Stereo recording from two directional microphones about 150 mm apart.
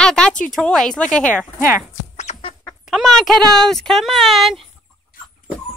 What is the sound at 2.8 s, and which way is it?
Speech, centre (ahead or behind).